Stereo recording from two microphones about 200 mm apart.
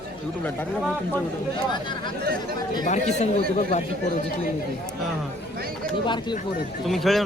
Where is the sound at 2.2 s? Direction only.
50° right (ahead or behind).